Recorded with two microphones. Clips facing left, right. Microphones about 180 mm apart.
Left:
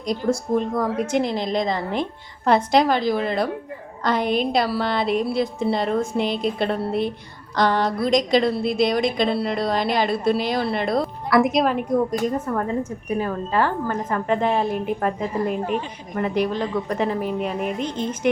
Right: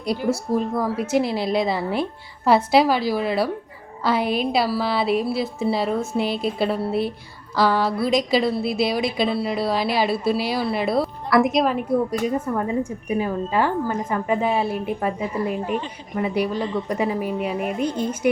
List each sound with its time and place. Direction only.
0.0 s a woman's voice: 10° right (ahead or behind)